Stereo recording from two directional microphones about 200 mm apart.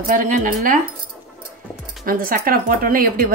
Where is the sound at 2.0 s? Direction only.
45° right (ahead or behind).